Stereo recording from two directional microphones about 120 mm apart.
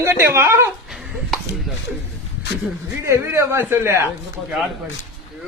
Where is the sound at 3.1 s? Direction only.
20° right (ahead or behind).